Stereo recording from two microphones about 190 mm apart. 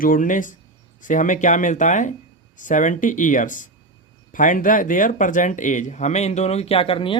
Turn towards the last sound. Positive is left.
turn(degrees=30)  # may be behind; listen again after turning